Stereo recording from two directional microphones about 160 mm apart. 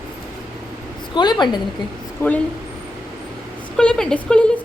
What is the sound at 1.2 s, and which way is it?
Speech, 25° left (ahead or behind).